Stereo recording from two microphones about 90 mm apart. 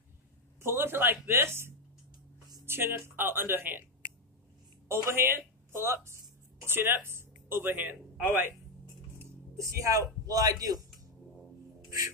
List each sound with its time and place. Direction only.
0.6 s speech: 25° right (ahead or behind)
4.8 s a woman's voice: 30° right (ahead or behind)
9.7 s a man's voice: 40° right (ahead or behind)